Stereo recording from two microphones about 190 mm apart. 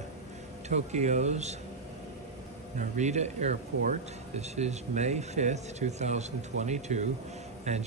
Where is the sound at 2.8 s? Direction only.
40° right (ahead or behind).